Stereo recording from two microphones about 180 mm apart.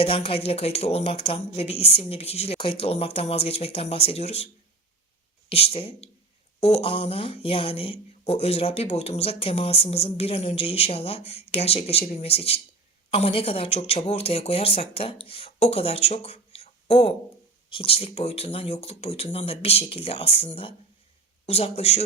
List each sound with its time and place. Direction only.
0.0 s speech: 30° left (ahead or behind)
5.5 s speech: 35° left (ahead or behind)